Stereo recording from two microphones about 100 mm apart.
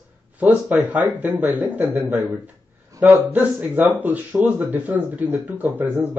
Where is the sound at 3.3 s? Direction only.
20° right (ahead or behind).